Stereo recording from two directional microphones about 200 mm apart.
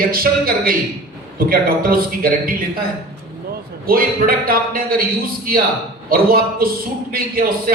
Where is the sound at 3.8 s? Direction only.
45° right (ahead or behind).